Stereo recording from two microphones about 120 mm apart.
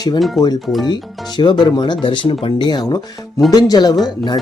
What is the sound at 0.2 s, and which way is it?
Speech, centre (ahead or behind).